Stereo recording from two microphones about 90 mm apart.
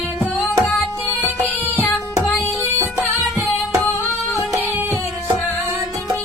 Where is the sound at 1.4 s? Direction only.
20° left (ahead or behind).